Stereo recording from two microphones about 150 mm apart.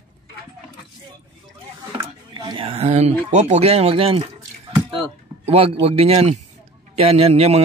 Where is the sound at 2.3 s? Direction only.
35° right (ahead or behind).